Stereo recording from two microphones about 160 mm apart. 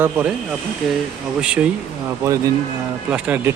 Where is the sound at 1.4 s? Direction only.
5° right (ahead or behind).